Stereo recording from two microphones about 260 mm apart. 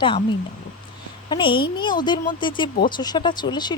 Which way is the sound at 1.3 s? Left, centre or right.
Centre.